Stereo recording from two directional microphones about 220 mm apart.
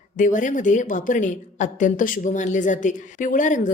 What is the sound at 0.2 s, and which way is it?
A woman's voice, 35° left (ahead or behind).